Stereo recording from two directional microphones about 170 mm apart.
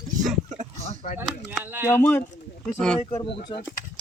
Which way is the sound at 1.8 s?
15° left (ahead or behind).